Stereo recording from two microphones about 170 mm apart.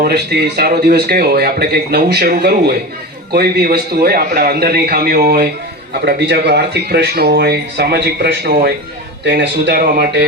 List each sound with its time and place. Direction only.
0.0 s a man's voice: 75° right (ahead or behind)
9.2 s speech: 90° right; by 10.2 s 65° right (ahead or behind)